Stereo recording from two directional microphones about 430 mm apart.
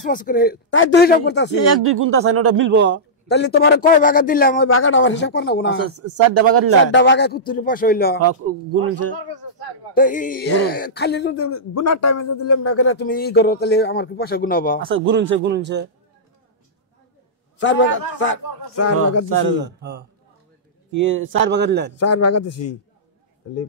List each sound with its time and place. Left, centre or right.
0.1 s speech: centre
1.6 s speech: right
3.3 s speech: left
5.9 s speech: right
6.9 s speech: left
9.9 s speech: centre
14.8 s speech: right
17.6 s speech: left
20.9 s speech: right
21.9 s a man's voice: left